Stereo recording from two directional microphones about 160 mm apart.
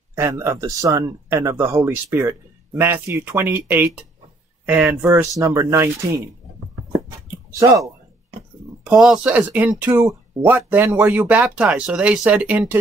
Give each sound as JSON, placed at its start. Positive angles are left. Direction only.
{"t": 0.1, "sound": "speech", "side_deg": -15}
{"t": 7.5, "sound": "speech", "side_deg": -20}
{"t": 8.8, "sound": "speech", "side_deg": -5}